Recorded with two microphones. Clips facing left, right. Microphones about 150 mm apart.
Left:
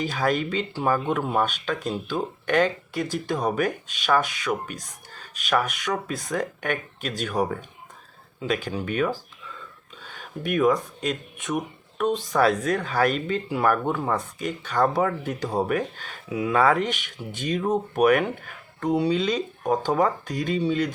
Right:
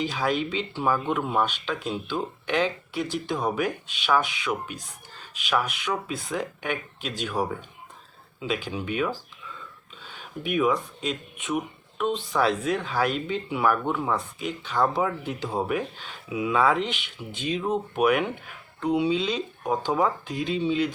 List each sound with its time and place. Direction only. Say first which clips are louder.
0.0 s speech: left 2 dB; 45° left (ahead or behind)
1.7 s speech: left 2 dB; 5° right (ahead or behind)
2.0 s speech: left 3 dB; 45° left (ahead or behind)